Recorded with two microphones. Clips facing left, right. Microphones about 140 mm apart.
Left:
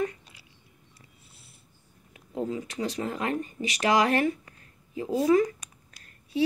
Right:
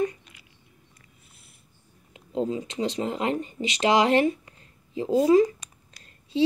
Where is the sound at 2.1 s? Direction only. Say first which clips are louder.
Right 4 dB; 20° right (ahead or behind).